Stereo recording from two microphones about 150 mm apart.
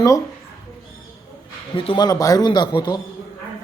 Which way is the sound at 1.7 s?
35° left (ahead or behind).